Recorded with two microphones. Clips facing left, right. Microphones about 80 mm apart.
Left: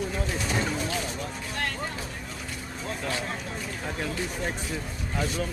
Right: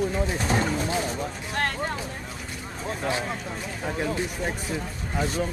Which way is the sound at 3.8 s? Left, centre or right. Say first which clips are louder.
Right 6 dB; centre.